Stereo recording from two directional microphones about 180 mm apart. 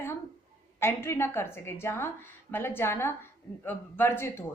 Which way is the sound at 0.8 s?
15° left (ahead or behind).